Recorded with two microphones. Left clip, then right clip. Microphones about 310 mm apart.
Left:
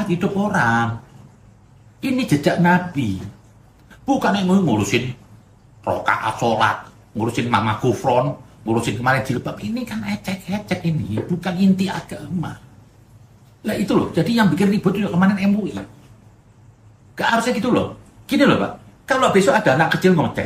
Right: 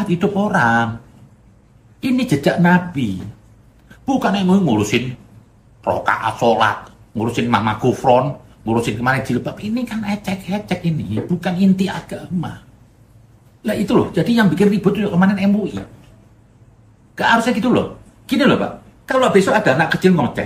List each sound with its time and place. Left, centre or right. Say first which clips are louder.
0.1 s speech: right 4 dB; centre
2.0 s speech: right 2 dB; centre
13.6 s speech: right 3 dB; centre
17.1 s speech: right 3 dB; centre